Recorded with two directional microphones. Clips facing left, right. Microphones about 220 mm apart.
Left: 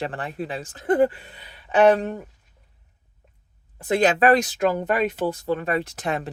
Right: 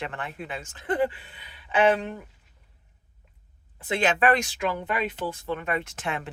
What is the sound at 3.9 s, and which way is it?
Speech, 40° left (ahead or behind).